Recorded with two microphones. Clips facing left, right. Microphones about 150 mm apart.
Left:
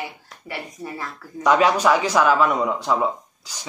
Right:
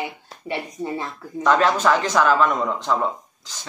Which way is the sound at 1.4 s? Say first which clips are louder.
Left 1 dB; 10° left (ahead or behind).